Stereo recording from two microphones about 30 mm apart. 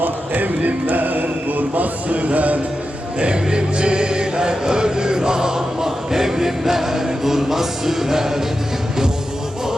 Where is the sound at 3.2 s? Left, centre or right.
Right; by 8.5 s centre.